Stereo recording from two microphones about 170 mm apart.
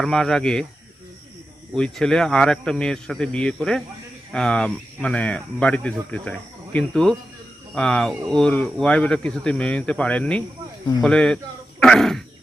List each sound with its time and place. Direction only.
0.0 s speech: centre (ahead or behind)
1.7 s speech: 5° left (ahead or behind)